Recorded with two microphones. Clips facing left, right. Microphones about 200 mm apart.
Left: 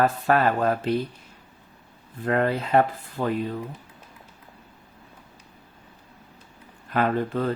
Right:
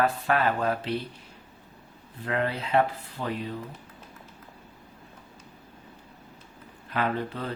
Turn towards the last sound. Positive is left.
turn(degrees=50)  # may be behind; listen again after turning